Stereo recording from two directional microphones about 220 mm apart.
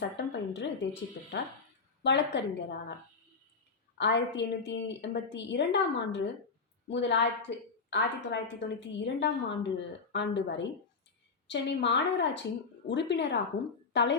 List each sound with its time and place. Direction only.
0.2 s a woman's voice: 55° left (ahead or behind)
2.0 s a woman's voice: 50° left (ahead or behind)
3.9 s a woman's voice: 50° left (ahead or behind)